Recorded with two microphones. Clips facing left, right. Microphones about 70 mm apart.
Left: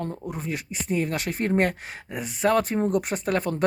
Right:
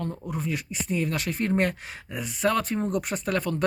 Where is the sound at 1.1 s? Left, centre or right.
Centre.